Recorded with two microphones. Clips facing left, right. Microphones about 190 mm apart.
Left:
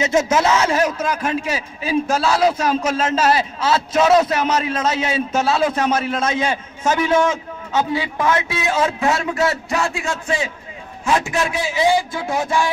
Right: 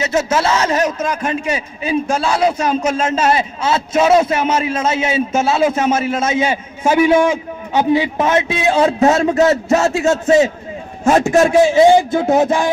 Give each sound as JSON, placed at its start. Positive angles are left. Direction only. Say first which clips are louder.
{"t": 0.0, "sound": "a man's voice", "louder": "even", "side_deg": 15}